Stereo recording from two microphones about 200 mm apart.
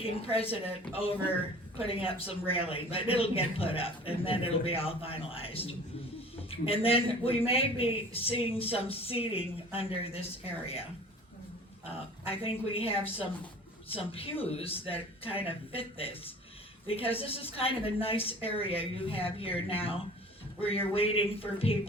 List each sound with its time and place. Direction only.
0.0 s a man's voice: 30° left (ahead or behind)
1.8 s a man's voice: 30° left (ahead or behind)
12.2 s a man's voice: 30° left (ahead or behind)